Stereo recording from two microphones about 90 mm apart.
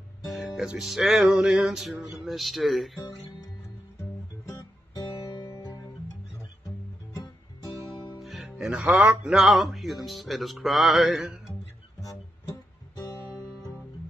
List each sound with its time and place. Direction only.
0.2 s music: centre (ahead or behind)
4.6 s guitar: 50° left (ahead or behind)
7.6 s guitar: 55° left (ahead or behind)
8.2 s music: centre (ahead or behind)
8.9 s a sound: 15° right (ahead or behind)
9.3 s music: 5° right (ahead or behind)
12.0 s music: 40° left (ahead or behind)